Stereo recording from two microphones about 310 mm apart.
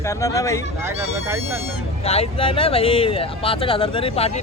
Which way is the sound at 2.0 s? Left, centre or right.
Centre.